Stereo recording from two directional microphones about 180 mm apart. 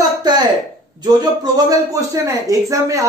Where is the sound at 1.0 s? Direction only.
20° right (ahead or behind).